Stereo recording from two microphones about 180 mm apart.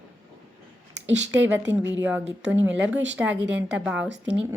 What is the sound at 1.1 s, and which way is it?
Speech, 85° right.